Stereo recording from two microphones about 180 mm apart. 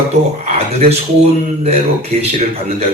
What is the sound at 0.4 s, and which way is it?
Keys jangling, 35° right (ahead or behind).